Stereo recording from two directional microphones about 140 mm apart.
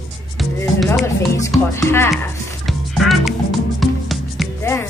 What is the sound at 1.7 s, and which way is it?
Speech, 20° left (ahead or behind).